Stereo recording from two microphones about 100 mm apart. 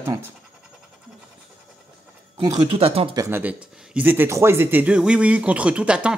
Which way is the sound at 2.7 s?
75° right (ahead or behind).